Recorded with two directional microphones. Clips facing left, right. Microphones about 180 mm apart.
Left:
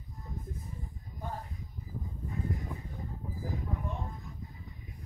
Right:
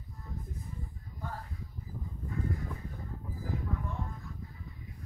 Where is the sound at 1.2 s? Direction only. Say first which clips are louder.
Left 2 dB; 20° left (ahead or behind).